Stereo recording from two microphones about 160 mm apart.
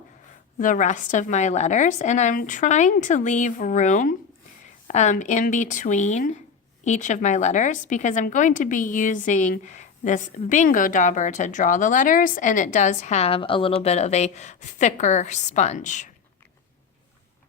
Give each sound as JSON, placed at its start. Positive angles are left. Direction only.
{"t": 0.6, "sound": "a woman's voice", "side_deg": 50}
{"t": 13.8, "sound": "a woman's voice", "side_deg": 45}